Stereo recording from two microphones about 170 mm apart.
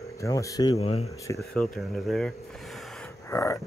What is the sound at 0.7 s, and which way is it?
Speech, 35° left (ahead or behind).